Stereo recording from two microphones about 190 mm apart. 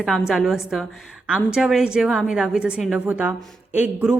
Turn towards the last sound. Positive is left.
turn(degrees=-10)  # may be behind; listen again after turning